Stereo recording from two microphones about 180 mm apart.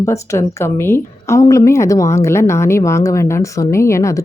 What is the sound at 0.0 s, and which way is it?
A woman's voice, 15° left (ahead or behind).